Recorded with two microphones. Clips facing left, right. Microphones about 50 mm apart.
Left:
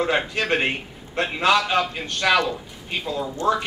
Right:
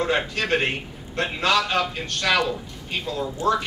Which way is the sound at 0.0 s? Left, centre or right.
Centre.